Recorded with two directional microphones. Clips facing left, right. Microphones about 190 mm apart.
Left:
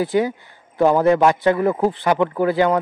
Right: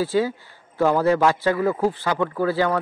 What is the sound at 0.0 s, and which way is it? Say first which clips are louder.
A man's voice: left 2 dB; 15° left (ahead or behind).